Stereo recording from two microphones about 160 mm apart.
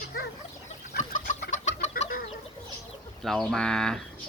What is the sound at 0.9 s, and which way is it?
Chicken, 55° left (ahead or behind).